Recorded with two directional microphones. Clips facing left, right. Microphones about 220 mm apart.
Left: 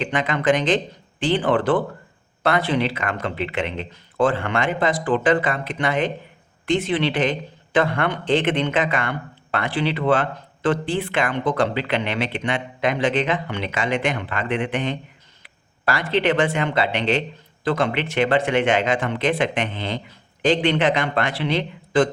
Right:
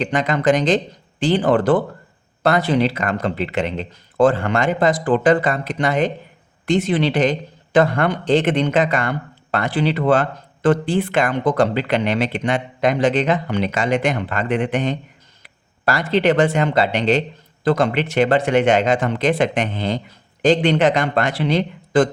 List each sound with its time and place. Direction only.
0.0 s a man's voice: 40° right (ahead or behind)